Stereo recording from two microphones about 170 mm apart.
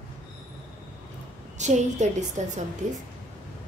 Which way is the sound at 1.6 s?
45° right (ahead or behind).